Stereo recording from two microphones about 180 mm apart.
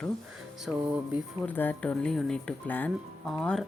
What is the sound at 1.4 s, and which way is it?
Speech, 10° left (ahead or behind).